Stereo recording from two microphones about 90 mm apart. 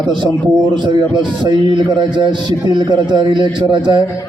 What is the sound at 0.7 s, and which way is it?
A man's voice, 60° right (ahead or behind).